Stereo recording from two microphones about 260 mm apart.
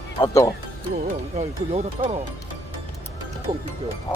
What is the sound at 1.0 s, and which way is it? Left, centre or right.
Speech, right.